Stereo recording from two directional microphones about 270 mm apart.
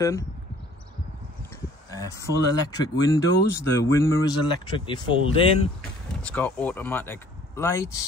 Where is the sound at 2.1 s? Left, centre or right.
Centre.